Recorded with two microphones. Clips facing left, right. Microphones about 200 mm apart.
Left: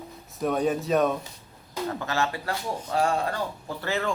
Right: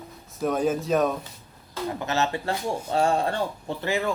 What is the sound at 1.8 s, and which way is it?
Speech, 20° right (ahead or behind).